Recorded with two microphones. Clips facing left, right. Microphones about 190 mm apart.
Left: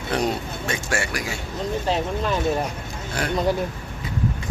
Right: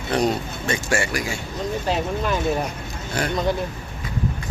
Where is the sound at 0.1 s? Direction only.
Centre (ahead or behind).